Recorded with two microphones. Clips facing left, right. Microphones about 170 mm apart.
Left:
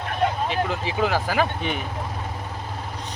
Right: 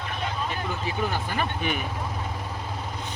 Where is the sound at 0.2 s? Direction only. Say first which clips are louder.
Left 9 dB; 75° left (ahead or behind).